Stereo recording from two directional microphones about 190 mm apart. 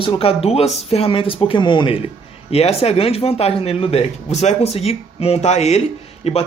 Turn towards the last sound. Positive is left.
turn(degrees=35)  # may be behind; listen again after turning